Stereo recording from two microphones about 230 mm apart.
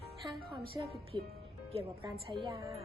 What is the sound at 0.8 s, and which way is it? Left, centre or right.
Speech, centre.